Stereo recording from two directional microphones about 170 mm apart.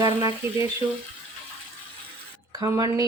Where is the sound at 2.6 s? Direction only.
20° right (ahead or behind).